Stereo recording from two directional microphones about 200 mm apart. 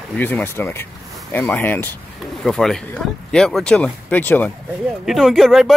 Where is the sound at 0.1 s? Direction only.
10° left (ahead or behind).